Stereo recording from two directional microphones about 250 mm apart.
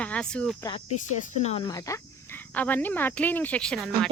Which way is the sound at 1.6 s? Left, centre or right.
Centre.